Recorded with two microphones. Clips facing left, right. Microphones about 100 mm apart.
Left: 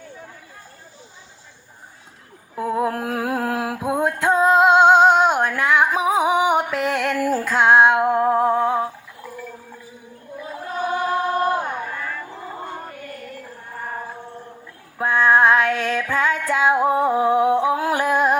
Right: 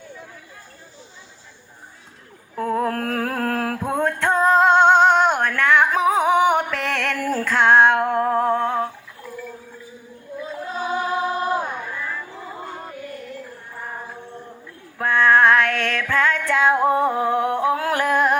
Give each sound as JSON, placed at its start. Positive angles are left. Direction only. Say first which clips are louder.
{"t": 2.6, "sound": "music", "louder": "even", "side_deg": 15}
{"t": 10.9, "sound": "music", "louder": "left 2 dB", "side_deg": 55}
{"t": 14.9, "sound": "female singing", "louder": "even", "side_deg": 15}